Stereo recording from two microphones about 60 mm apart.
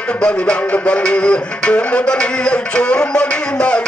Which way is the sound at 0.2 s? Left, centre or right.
Centre.